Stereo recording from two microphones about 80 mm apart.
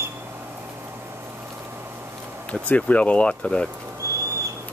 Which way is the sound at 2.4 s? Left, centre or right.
Centre.